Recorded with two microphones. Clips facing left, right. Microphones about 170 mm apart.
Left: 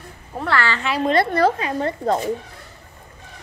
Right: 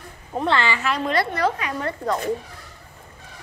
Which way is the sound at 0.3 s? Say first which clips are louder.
Right 1 dB; 20° right (ahead or behind).